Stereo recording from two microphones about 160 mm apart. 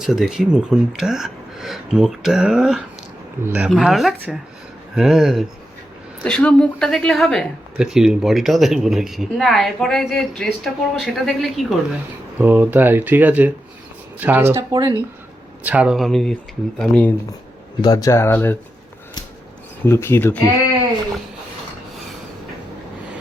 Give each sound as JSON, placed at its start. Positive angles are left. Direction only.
{"t": 0.0, "sound": "speech", "side_deg": -5}
{"t": 12.4, "sound": "speech", "side_deg": -10}
{"t": 15.6, "sound": "speech", "side_deg": -10}
{"t": 17.8, "sound": "speech", "side_deg": 20}
{"t": 19.8, "sound": "speech", "side_deg": 15}